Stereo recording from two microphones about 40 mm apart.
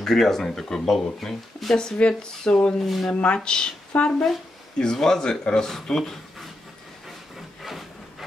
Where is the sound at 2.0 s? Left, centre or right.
Left.